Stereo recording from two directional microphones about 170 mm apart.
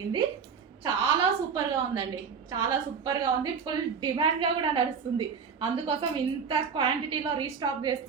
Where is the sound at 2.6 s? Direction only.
25° right (ahead or behind).